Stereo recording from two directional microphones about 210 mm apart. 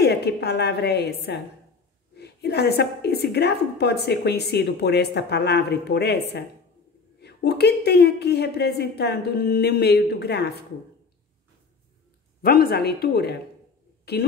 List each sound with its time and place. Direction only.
0.0 s a woman's voice: 50° left (ahead or behind)
12.4 s a woman's voice: 45° left (ahead or behind)